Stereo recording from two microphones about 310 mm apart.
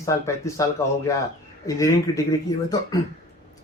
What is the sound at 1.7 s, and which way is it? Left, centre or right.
Speech, centre.